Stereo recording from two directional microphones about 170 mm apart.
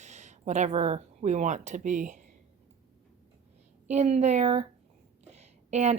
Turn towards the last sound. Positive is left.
turn(degrees=-40)  # may be behind; listen again after turning